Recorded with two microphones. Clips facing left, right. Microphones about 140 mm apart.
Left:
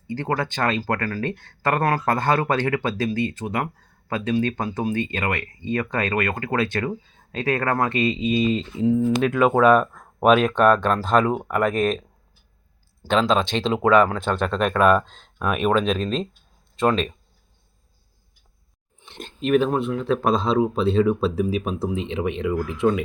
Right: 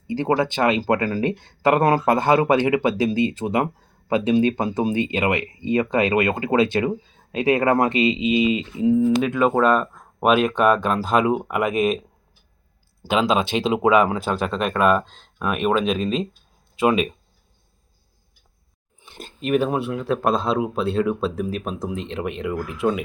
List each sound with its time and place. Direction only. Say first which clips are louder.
0.1 s speech: right 5 dB; 20° right (ahead or behind)
18.9 s speech: left 3 dB; 5° right (ahead or behind)